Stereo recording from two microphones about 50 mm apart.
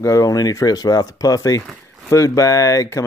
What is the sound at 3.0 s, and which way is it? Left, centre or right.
Speech, left.